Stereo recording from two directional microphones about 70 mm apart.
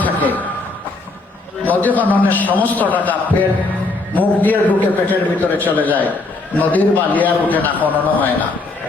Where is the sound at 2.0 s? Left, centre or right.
Left.